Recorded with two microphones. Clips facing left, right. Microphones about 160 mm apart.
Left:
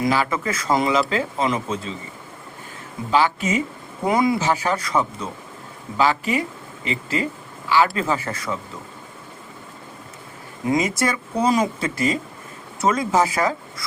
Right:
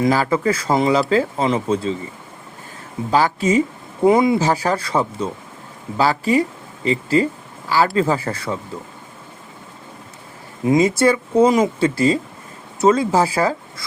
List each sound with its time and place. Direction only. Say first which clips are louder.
0.1 s speech: right 5 dB; 35° right (ahead or behind)
3.1 s speech: right 3 dB; 40° right (ahead or behind)
4.0 s speech: right 5 dB; 25° right (ahead or behind)
4.4 s speech: right 3 dB; 35° right (ahead or behind)
10.7 s speech: right 6 dB; 30° right (ahead or behind)